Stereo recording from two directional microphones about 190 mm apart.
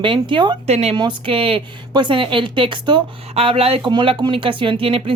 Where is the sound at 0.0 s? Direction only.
25° right (ahead or behind).